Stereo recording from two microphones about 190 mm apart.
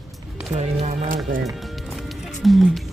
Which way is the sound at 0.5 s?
35° right (ahead or behind).